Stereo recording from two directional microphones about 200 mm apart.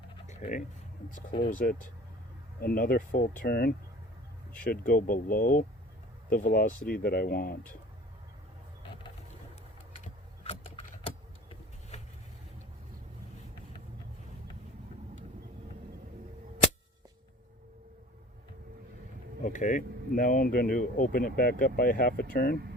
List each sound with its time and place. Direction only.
0.3 s a sound: 35° left (ahead or behind)
1.4 s speech: 45° left (ahead or behind)
4.9 s speech: 45° left (ahead or behind)
10.0 s typing: 30° left (ahead or behind)
11.9 s vehicle: 35° left (ahead or behind)
19.4 s speech: 40° left (ahead or behind)